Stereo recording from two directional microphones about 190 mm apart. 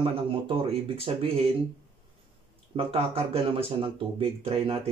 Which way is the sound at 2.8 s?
30° right (ahead or behind).